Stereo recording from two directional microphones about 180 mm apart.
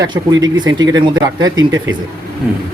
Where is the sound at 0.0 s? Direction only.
20° right (ahead or behind).